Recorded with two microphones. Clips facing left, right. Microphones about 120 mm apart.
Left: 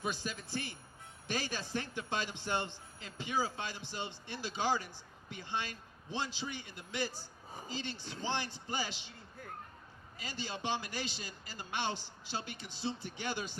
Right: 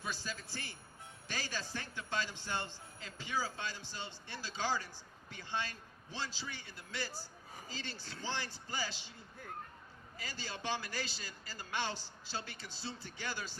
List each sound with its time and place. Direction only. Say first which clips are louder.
0.0 s speech: left 4 dB; 20° left (ahead or behind)
10.2 s speech: left 4 dB; 20° left (ahead or behind)